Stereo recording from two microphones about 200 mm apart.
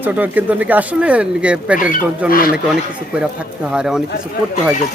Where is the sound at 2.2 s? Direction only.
45° left (ahead or behind).